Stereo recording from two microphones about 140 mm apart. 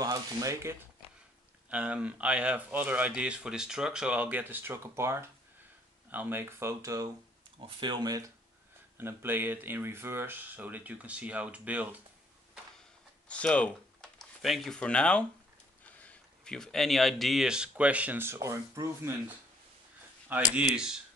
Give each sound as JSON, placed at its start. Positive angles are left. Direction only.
{"t": 0.0, "sound": "speech", "side_deg": -25}
{"t": 1.7, "sound": "speech", "side_deg": -10}
{"t": 7.5, "sound": "speech", "side_deg": -40}
{"t": 8.9, "sound": "speech", "side_deg": -15}
{"t": 13.3, "sound": "speech", "side_deg": 10}